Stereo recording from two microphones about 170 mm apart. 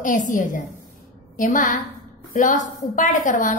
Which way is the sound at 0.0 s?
50° left (ahead or behind).